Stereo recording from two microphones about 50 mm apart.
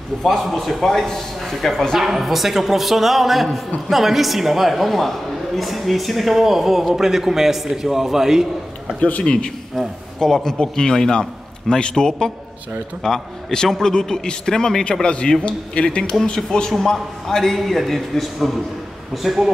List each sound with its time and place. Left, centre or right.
0.2 s a man's voice: centre
9.0 s a man's voice: left
10.1 s a man's voice: centre
14.9 s a man's voice: centre